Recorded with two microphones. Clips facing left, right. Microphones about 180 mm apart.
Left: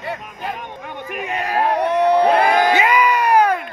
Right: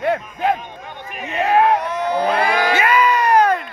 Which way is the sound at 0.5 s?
65° left (ahead or behind).